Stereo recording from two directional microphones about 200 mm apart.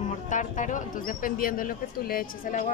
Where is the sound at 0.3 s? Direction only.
40° left (ahead or behind).